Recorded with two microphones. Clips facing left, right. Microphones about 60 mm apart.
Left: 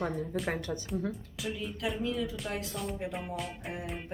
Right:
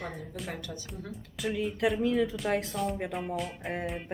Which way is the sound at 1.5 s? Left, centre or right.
Right.